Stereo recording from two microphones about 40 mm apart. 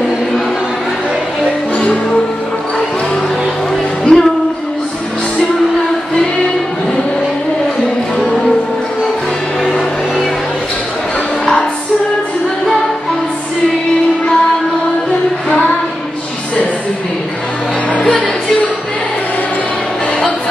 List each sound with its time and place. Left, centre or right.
4.1 s music: centre